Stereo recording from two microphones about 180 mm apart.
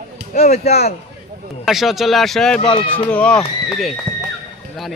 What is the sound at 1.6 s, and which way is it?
Speech, centre (ahead or behind).